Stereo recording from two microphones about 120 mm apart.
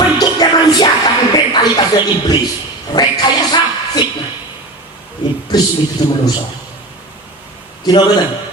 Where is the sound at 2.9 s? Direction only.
35° left (ahead or behind).